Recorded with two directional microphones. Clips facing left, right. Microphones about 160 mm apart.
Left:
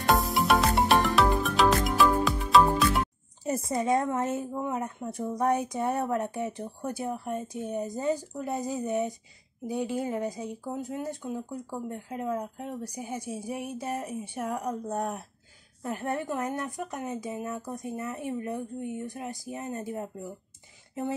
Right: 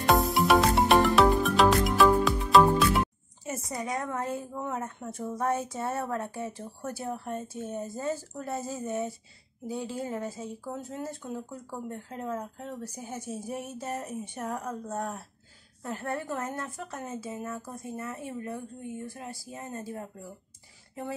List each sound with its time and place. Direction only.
0.0 s music: centre (ahead or behind)
3.4 s a woman's voice: 30° left (ahead or behind)